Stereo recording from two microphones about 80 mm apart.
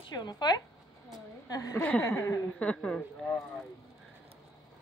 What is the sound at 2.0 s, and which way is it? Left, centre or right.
Speech, left.